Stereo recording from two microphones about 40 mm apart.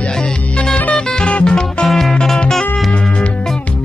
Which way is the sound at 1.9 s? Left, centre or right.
Centre.